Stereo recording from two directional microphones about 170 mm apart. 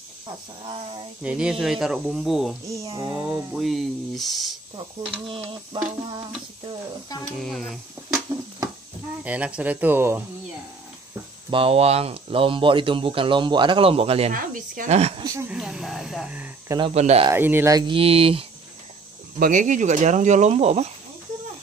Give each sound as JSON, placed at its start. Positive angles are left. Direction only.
{"t": 1.2, "sound": "speech", "side_deg": -5}
{"t": 2.7, "sound": "speech", "side_deg": -20}
{"t": 3.5, "sound": "speech", "side_deg": 0}
{"t": 5.2, "sound": "speech", "side_deg": -30}
{"t": 7.3, "sound": "speech", "side_deg": 0}
{"t": 9.2, "sound": "speech", "side_deg": -10}
{"t": 11.5, "sound": "speech", "side_deg": -35}
{"t": 14.3, "sound": "speech", "side_deg": -50}
{"t": 15.2, "sound": "speech", "side_deg": -15}
{"t": 15.5, "sound": "speech", "side_deg": -5}
{"t": 16.9, "sound": "speech", "side_deg": -40}
{"t": 17.3, "sound": "speech", "side_deg": -10}
{"t": 19.4, "sound": "speech", "side_deg": -50}